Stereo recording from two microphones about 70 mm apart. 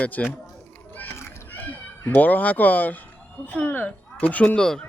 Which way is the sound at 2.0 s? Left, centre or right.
Left.